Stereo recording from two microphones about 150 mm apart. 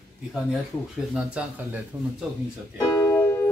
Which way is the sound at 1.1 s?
5° right (ahead or behind).